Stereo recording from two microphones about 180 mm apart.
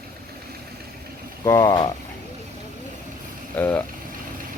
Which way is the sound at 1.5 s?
20° left (ahead or behind).